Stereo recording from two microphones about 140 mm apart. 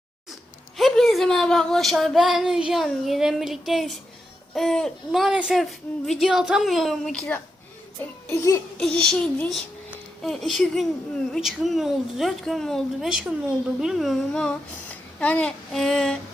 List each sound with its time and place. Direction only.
0.8 s a woman's voice: centre (ahead or behind); by 8.6 s 20° left (ahead or behind)
8.8 s a woman's voice: 5° left (ahead or behind)